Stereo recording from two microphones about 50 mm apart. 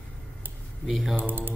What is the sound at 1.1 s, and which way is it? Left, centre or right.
Speech, right.